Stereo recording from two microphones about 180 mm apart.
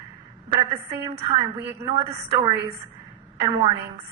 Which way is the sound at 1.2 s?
30° right (ahead or behind).